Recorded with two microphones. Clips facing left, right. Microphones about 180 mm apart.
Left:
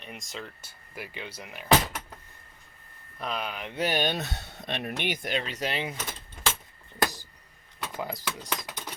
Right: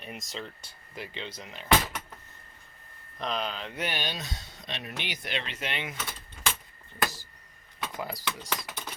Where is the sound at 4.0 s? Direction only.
60° left (ahead or behind); by 5.9 s 35° left (ahead or behind).